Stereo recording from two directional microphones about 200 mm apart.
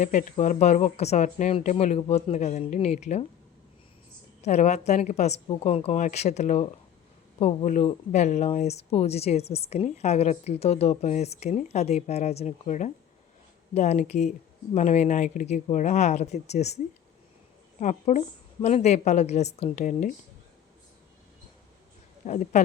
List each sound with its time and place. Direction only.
0.0 s speech: 40° left (ahead or behind)
4.4 s speech: 35° left (ahead or behind)
22.2 s speech: 35° left (ahead or behind)